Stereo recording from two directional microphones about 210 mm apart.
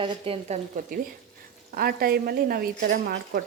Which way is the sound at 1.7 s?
45° right (ahead or behind).